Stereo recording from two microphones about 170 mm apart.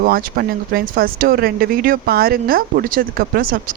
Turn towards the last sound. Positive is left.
turn(degrees=-55)  # may be behind; listen again after turning